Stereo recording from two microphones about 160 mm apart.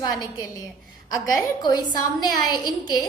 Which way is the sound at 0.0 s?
25° left (ahead or behind).